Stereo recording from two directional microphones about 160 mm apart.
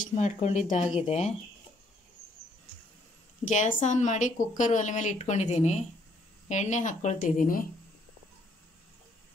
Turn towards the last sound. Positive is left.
turn(degrees=55)  # may be behind; listen again after turning